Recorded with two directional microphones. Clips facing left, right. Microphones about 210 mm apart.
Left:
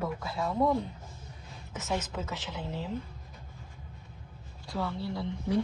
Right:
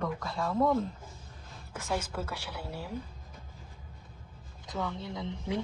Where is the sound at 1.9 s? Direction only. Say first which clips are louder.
Even; 10° right (ahead or behind).